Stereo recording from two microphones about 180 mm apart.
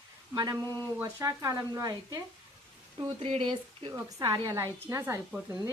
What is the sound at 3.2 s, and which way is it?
A woman's voice, 30° right (ahead or behind).